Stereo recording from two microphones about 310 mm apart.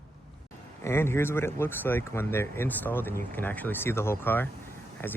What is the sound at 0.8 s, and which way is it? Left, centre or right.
Speech, centre.